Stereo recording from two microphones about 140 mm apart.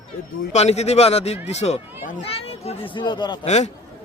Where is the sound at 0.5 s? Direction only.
50° left (ahead or behind); by 3.3 s 30° left (ahead or behind).